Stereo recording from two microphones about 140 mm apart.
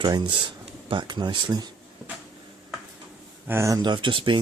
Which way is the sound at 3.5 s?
20° right (ahead or behind).